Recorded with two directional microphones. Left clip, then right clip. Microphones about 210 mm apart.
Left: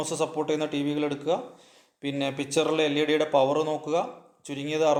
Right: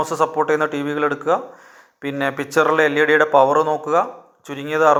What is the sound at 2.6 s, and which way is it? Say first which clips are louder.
Speech: right 9 dB; 25° right (ahead or behind).